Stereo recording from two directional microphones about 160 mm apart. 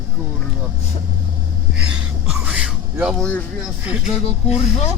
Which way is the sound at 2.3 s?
5° right (ahead or behind).